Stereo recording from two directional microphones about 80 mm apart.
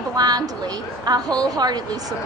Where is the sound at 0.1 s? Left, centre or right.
Right.